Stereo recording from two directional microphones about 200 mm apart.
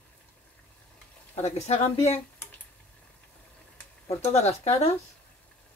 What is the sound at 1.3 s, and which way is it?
Speech, 35° left (ahead or behind).